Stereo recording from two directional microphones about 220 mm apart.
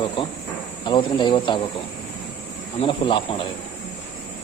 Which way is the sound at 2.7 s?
25° left (ahead or behind).